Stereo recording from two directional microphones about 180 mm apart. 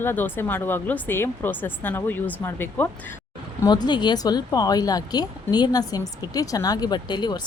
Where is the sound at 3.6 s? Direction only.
25° left (ahead or behind).